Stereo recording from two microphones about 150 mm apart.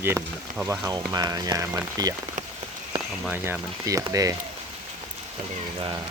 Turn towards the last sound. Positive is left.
turn(degrees=-25)  # may be behind; listen again after turning